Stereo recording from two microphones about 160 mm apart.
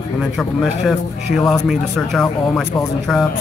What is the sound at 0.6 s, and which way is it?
Speech, centre (ahead or behind).